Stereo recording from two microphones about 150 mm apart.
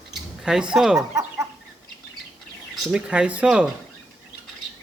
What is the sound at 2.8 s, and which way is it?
Speech, 5° right (ahead or behind).